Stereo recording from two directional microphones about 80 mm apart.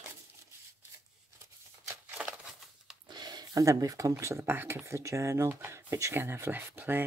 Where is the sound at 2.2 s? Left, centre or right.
Centre.